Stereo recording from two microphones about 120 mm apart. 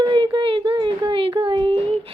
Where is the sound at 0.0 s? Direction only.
40° right (ahead or behind).